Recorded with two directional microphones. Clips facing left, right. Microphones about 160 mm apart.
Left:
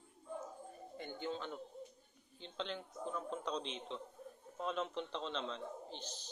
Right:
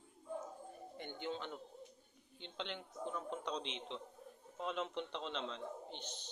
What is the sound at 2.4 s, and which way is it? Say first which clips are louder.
A man's voice: left 2 dB; 25° right (ahead or behind).